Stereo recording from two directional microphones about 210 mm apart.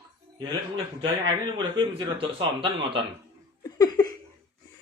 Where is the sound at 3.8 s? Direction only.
20° left (ahead or behind).